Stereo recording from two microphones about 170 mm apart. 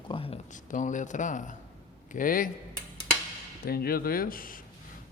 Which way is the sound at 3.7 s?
65° left (ahead or behind).